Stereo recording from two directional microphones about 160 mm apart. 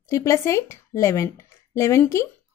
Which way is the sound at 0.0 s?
20° left (ahead or behind).